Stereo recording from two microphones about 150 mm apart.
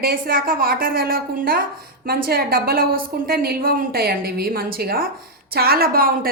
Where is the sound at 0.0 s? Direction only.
75° right (ahead or behind).